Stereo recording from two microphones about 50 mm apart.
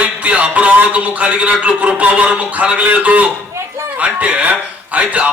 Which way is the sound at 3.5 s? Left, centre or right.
Right.